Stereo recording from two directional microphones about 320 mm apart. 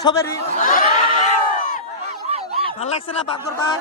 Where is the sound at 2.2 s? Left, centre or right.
Centre.